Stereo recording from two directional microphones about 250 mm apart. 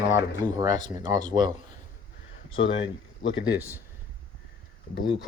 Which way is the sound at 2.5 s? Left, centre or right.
Left.